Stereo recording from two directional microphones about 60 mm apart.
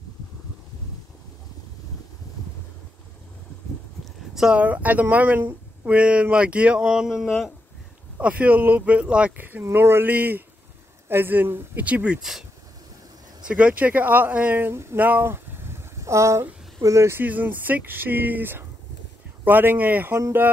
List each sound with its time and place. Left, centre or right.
4.6 s speech: right; by 7.5 s centre
8.2 s speech: right
9.4 s speech: right
9.7 s speech: right
11.8 s speech: right
12.2 s speech: centre
13.4 s speech: centre; by 14.8 s right
15.0 s a sound: right
16.0 s speech: right
17.2 s speech: right